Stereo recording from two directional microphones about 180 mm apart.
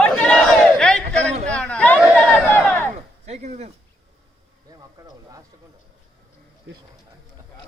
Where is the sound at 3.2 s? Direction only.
40° right (ahead or behind).